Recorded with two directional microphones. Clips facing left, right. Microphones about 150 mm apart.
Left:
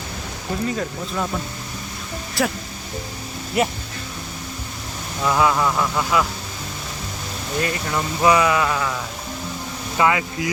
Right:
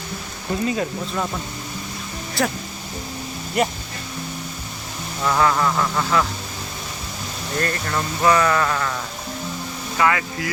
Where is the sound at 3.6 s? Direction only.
5° left (ahead or behind).